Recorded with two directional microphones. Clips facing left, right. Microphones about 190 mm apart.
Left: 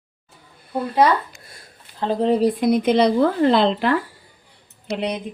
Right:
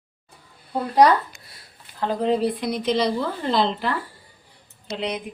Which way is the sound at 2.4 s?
50° left (ahead or behind).